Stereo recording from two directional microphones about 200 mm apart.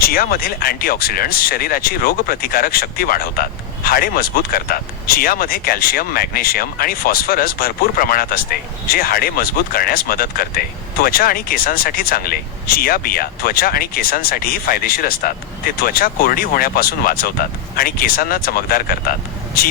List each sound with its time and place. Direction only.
0.0 s speech: 45° left (ahead or behind)